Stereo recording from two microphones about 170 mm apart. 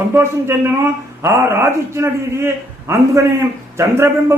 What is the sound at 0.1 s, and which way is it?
A man's voice, 15° right (ahead or behind).